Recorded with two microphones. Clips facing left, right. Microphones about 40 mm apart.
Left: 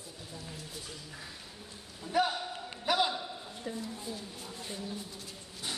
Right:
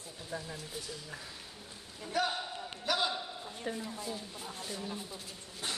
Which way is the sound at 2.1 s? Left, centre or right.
Centre.